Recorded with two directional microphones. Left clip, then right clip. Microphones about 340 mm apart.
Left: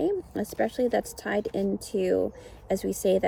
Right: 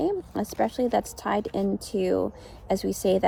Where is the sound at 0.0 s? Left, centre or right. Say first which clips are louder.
Right 1 dB; centre.